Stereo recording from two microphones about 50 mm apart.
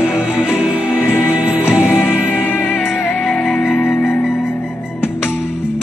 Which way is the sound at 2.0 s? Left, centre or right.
Left.